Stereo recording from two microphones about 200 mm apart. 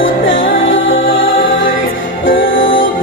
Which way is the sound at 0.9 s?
45° left (ahead or behind).